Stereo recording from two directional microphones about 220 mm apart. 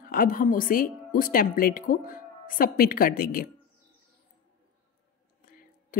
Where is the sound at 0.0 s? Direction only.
40° left (ahead or behind).